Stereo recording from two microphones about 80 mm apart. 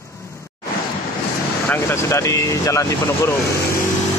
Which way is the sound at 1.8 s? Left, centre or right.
Left.